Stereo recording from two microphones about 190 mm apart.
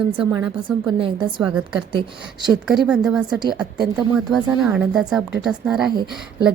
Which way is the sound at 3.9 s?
20° right (ahead or behind).